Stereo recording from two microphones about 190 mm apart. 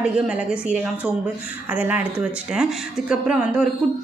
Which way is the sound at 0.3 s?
5° right (ahead or behind).